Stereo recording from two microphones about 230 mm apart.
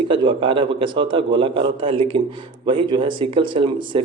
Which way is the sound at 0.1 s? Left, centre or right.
Right.